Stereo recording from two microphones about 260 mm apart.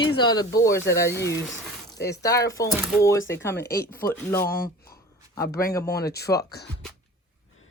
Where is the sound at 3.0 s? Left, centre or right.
Centre.